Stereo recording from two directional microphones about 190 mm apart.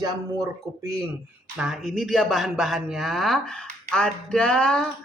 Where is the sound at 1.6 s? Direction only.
Centre (ahead or behind).